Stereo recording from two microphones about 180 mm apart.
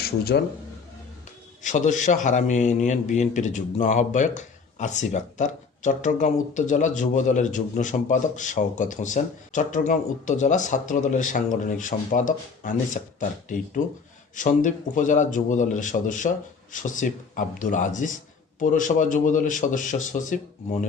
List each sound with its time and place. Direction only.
0.3 s speech: 70° left (ahead or behind)
1.6 s a man's voice: 45° left (ahead or behind)